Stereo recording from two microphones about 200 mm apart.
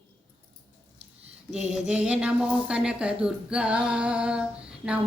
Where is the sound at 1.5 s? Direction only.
5° right (ahead or behind).